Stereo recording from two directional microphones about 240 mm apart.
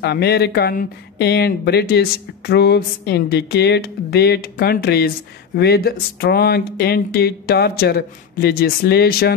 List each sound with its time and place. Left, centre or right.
0.0 s speech: left